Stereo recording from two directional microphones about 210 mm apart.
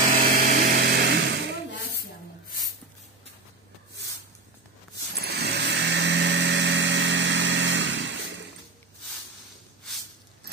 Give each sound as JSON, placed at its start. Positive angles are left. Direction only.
{"t": 0.1, "sound": "power tool", "side_deg": -45}
{"t": 5.2, "sound": "vehicle", "side_deg": -50}